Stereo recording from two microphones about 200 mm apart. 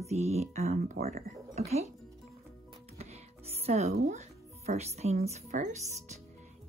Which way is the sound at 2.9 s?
30° right (ahead or behind).